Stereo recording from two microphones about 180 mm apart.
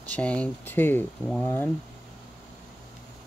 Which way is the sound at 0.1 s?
5° left (ahead or behind).